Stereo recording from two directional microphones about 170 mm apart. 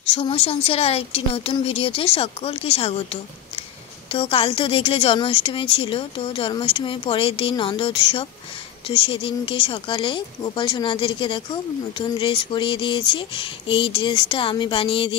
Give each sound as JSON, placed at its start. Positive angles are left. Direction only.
{"t": 0.0, "sound": "speech", "side_deg": 35}